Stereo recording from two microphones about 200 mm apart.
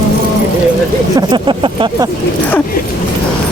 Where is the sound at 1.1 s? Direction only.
25° right (ahead or behind).